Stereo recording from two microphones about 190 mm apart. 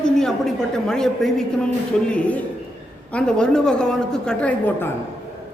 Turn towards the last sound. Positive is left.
turn(degrees=10)  # may be behind; listen again after turning